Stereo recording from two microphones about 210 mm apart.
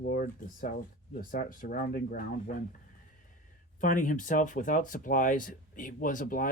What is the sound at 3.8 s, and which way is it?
Speech, 40° left (ahead or behind).